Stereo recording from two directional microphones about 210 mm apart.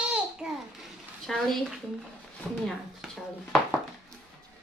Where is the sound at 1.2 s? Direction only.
Centre (ahead or behind).